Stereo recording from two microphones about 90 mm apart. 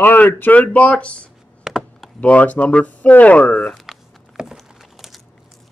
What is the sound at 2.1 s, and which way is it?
Speech, 15° left (ahead or behind).